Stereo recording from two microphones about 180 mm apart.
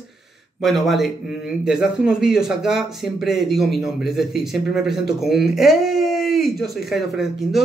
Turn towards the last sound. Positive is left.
turn(degrees=0)  # may be behind; listen again after turning